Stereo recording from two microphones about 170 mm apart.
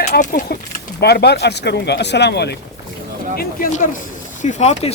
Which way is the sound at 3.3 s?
50° left (ahead or behind).